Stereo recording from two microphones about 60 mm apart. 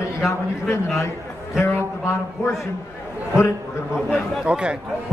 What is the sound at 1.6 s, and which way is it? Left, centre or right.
Speech, left.